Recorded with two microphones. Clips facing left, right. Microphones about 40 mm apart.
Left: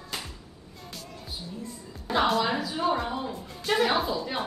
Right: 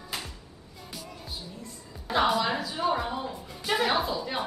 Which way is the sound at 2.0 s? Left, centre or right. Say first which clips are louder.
Even; centre.